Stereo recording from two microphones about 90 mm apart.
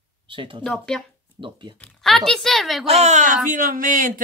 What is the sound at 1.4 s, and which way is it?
Speech, 65° right (ahead or behind).